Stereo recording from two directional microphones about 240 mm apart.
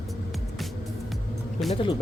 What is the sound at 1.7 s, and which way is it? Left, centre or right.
Speech, left.